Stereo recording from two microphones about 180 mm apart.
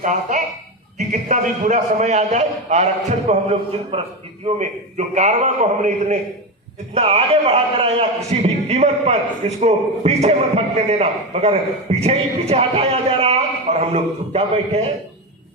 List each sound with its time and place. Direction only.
0.0 s a man's voice: 45° right (ahead or behind)